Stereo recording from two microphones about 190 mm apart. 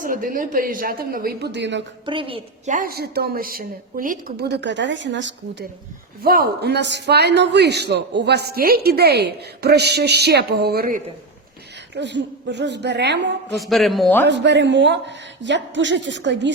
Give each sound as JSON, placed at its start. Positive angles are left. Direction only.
{"t": 0.0, "sound": "a woman's voice", "side_deg": -45}
{"t": 2.0, "sound": "a woman's voice", "side_deg": -25}
{"t": 2.7, "sound": "a man's voice", "side_deg": -50}
{"t": 6.2, "sound": "a man's voice", "side_deg": -50}
{"t": 11.9, "sound": "a man's voice", "side_deg": -65}
{"t": 13.6, "sound": "a man's voice", "side_deg": 0}
{"t": 14.3, "sound": "speech", "side_deg": -65}